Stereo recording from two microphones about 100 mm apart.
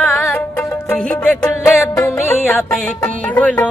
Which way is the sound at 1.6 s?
30° left (ahead or behind).